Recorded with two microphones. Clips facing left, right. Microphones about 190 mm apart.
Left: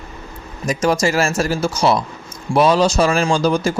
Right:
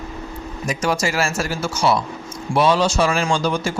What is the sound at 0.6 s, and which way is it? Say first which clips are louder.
A man's voice: left 5 dB; 40° left (ahead or behind).